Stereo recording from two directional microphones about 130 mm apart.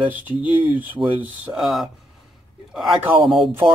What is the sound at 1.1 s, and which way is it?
Speech, 5° right (ahead or behind).